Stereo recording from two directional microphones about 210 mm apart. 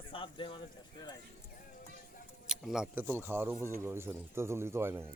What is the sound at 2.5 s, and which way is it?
Speech, centre (ahead or behind).